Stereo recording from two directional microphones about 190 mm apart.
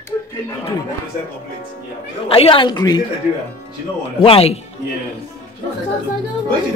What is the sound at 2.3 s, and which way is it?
Speech, 30° left (ahead or behind).